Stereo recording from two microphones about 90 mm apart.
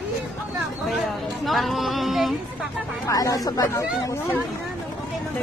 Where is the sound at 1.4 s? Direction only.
Centre (ahead or behind).